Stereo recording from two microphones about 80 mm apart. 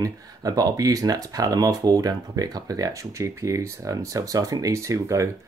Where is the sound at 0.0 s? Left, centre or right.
Right.